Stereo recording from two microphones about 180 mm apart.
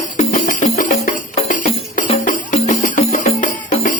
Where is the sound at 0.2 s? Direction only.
45° left (ahead or behind).